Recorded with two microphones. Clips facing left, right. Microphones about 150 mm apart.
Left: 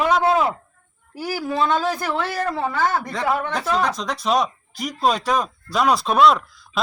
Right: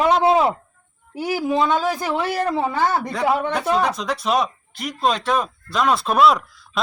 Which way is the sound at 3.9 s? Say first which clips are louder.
Even; centre (ahead or behind).